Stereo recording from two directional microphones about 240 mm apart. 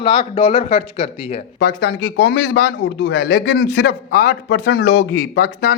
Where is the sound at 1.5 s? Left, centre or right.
Left.